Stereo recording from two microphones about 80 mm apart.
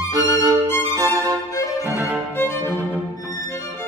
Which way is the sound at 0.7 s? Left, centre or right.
Left.